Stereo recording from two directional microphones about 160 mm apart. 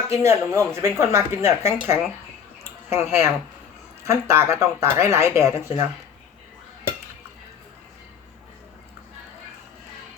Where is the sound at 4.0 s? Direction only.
15° right (ahead or behind).